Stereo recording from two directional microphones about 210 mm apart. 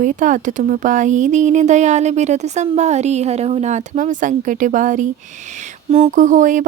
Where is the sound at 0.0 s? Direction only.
40° right (ahead or behind).